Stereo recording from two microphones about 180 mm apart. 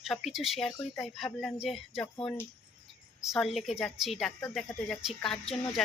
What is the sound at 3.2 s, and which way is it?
A woman's voice, centre (ahead or behind).